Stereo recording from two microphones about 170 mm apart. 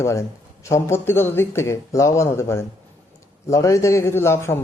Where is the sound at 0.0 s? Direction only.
15° left (ahead or behind).